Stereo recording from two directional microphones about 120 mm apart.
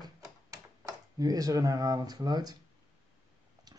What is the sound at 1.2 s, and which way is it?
Speech, 30° right (ahead or behind).